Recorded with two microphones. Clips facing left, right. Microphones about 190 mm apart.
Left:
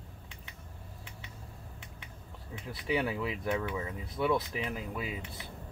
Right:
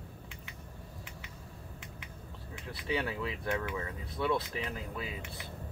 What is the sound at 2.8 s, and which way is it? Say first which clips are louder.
Speech: left 3 dB; 15° left (ahead or behind).